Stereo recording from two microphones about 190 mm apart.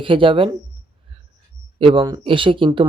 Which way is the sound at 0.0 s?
25° right (ahead or behind).